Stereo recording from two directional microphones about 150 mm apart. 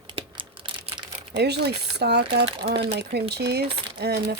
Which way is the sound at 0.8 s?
35° right (ahead or behind).